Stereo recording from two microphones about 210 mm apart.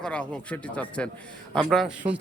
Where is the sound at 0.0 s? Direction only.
5° left (ahead or behind).